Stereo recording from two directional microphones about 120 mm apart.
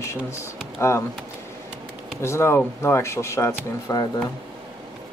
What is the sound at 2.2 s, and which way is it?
Speech, 20° left (ahead or behind).